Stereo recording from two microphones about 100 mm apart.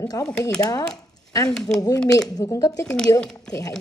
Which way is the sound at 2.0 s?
35° left (ahead or behind).